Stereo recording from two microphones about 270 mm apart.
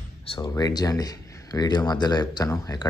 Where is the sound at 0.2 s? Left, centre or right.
Centre.